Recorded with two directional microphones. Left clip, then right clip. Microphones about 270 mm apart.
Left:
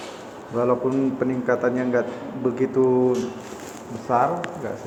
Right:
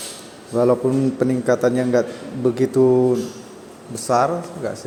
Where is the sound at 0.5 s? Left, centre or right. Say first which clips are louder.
Right 4 dB; right.